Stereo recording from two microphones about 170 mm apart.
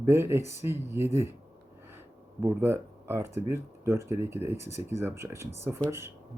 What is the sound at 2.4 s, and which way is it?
Speech, 15° right (ahead or behind).